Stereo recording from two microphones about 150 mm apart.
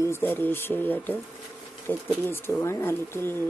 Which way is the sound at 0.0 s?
15° left (ahead or behind).